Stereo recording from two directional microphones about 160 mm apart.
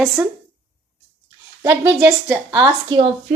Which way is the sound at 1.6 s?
15° right (ahead or behind).